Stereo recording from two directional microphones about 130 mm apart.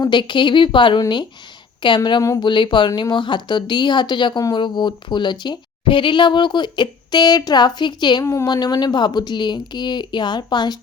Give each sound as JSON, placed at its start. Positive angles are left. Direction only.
{"t": 0.0, "sound": "speech", "side_deg": 35}
{"t": 8.2, "sound": "speech", "side_deg": 25}